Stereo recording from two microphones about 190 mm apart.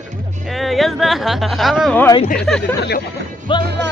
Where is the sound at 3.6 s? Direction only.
60° right (ahead or behind).